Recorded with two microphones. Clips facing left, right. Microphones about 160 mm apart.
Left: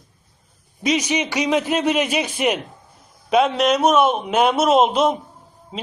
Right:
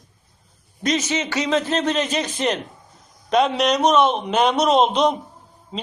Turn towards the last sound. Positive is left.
turn(degrees=0)  # may be behind; listen again after turning